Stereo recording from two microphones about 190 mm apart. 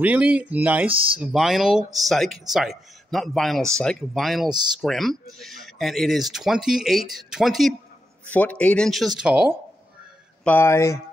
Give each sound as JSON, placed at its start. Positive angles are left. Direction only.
{"t": 0.0, "sound": "speech", "side_deg": -5}
{"t": 4.5, "sound": "speech", "side_deg": -20}
{"t": 4.8, "sound": "speech", "side_deg": 0}
{"t": 10.4, "sound": "speech", "side_deg": 10}